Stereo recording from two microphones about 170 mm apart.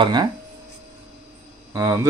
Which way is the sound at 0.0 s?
25° right (ahead or behind).